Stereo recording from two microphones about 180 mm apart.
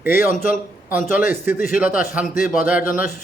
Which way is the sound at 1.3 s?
10° right (ahead or behind).